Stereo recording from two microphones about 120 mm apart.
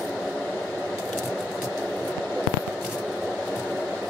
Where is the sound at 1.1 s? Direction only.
5° left (ahead or behind).